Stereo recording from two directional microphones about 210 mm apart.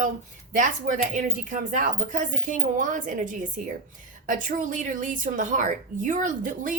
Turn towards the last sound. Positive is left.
turn(degrees=-40)  # may be behind; listen again after turning